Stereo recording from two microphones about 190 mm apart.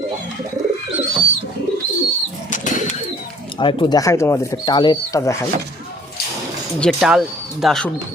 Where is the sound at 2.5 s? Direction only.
40° left (ahead or behind).